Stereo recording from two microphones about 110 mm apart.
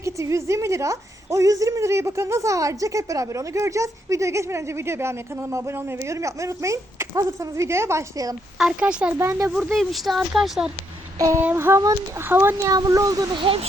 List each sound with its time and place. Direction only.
0.0 s a woman's voice: 25° right (ahead or behind)
8.5 s speech: 5° right (ahead or behind)
9.1 s a woman's voice: 25° right (ahead or behind)
9.7 s speech: centre (ahead or behind)
11.2 s a woman's voice: 30° right (ahead or behind)
12.6 s speech: 30° right (ahead or behind)
13.3 s speech: 50° right (ahead or behind)